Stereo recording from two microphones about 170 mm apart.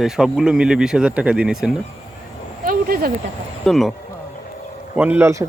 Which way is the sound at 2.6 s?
60° right (ahead or behind).